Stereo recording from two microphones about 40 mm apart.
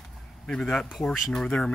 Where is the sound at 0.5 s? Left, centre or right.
Centre.